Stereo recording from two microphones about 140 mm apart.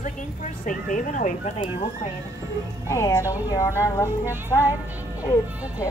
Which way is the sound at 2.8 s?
20° left (ahead or behind).